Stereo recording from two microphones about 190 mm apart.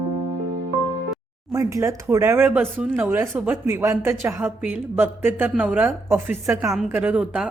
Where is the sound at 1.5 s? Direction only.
15° right (ahead or behind).